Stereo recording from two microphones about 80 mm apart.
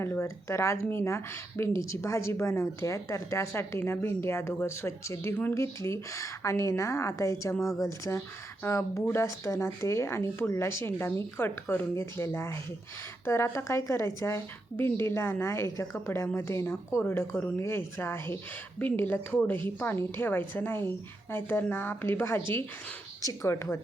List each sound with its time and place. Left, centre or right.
0.0 s speech: left
7.6 s speech: centre
7.9 s a woman's voice: left